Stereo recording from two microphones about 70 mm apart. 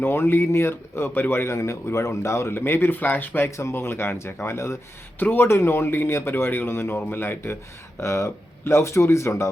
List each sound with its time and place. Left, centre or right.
0.0 s speech: left
5.2 s speech: left
7.9 s speech: left